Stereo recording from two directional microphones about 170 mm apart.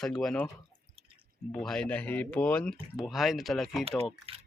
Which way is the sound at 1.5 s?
5° left (ahead or behind).